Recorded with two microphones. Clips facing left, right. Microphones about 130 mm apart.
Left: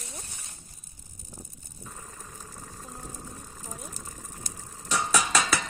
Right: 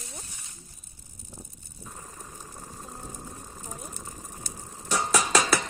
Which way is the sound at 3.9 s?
20° right (ahead or behind).